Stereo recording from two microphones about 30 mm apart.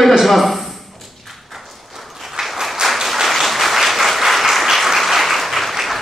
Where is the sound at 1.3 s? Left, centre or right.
Centre.